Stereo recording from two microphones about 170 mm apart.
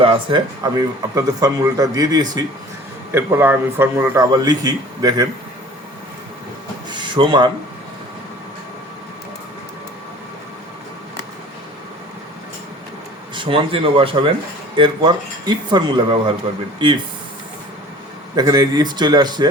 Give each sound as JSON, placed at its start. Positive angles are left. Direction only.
{"t": 0.0, "sound": "a man's voice", "side_deg": -30}
{"t": 6.9, "sound": "a sound", "side_deg": -30}
{"t": 13.3, "sound": "a man's voice", "side_deg": -30}
{"t": 18.3, "sound": "a man's voice", "side_deg": -25}